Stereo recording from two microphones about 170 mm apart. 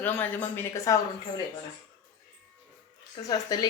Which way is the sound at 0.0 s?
10° left (ahead or behind).